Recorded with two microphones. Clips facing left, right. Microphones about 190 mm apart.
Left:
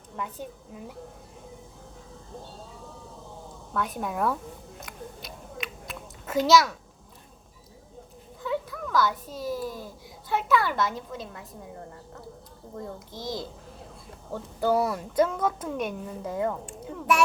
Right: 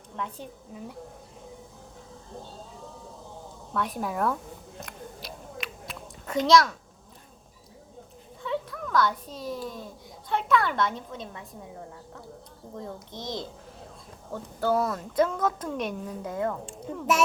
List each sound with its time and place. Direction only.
0.2 s a woman's voice: 5° left (ahead or behind)
3.8 s a woman's voice: centre (ahead or behind)
4.8 s a sound: centre (ahead or behind)
8.4 s a woman's voice: centre (ahead or behind)
13.1 s a woman's voice: 20° right (ahead or behind)
14.6 s a woman's voice: 10° left (ahead or behind)
16.6 s speech: 25° right (ahead or behind)